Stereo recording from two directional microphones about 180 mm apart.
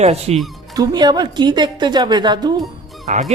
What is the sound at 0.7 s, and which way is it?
A woman's voice, 20° right (ahead or behind).